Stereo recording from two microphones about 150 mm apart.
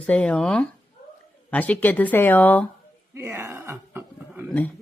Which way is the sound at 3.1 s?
15° right (ahead or behind).